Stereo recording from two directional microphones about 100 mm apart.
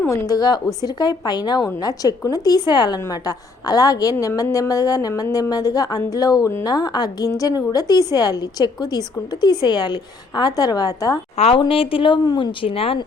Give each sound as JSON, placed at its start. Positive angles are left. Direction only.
{"t": 0.1, "sound": "a woman's voice", "side_deg": 40}
{"t": 11.3, "sound": "speech", "side_deg": 85}
{"t": 11.7, "sound": "speech", "side_deg": 65}
{"t": 12.2, "sound": "speech", "side_deg": 50}